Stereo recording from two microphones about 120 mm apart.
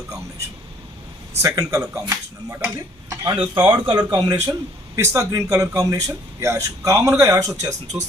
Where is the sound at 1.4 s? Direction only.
25° right (ahead or behind).